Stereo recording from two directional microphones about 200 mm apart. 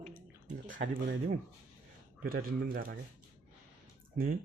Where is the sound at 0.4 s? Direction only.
40° right (ahead or behind).